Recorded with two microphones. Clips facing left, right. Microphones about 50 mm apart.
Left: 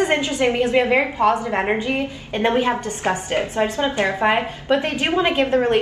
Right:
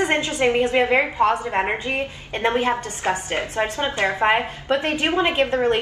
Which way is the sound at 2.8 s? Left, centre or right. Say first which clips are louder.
Left 1 dB; left.